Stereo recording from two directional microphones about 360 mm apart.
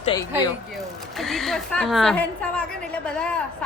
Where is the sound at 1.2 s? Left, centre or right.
Centre.